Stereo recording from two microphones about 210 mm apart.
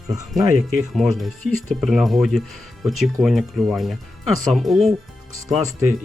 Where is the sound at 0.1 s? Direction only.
15° right (ahead or behind).